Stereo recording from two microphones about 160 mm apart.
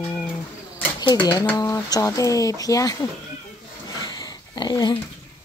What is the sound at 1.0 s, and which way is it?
Speech, 30° left (ahead or behind).